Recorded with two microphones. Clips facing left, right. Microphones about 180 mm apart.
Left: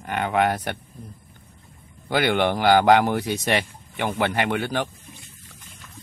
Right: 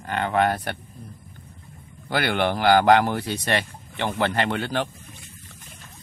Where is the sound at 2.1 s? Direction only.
15° left (ahead or behind).